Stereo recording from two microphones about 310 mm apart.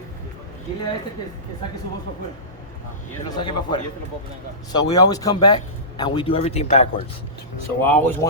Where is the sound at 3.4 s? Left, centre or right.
Centre.